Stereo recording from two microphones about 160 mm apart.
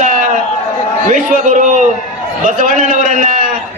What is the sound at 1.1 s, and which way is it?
Speech, 50° right (ahead or behind).